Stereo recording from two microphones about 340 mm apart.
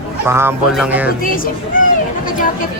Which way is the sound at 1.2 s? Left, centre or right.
Left.